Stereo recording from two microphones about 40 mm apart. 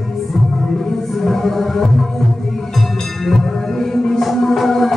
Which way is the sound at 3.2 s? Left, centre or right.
Centre.